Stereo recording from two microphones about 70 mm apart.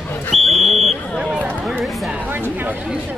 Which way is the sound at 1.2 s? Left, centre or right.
Centre.